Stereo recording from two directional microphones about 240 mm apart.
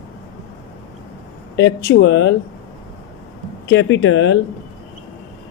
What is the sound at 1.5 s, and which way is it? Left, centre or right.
Speech, left.